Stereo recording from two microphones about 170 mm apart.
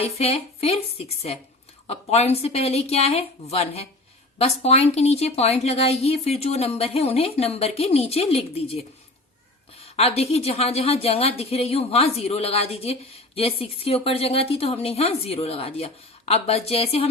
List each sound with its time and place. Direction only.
0.0 s a woman's voice: 40° left (ahead or behind)
9.8 s a woman's voice: 35° left (ahead or behind)